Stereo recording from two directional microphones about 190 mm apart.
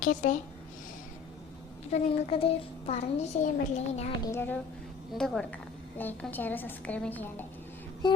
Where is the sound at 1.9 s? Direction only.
35° left (ahead or behind).